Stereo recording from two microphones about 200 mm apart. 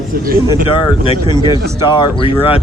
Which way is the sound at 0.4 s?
25° left (ahead or behind).